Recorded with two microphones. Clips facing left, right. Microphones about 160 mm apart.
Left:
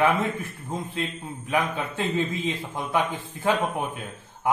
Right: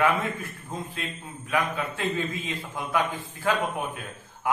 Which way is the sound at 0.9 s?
25° left (ahead or behind).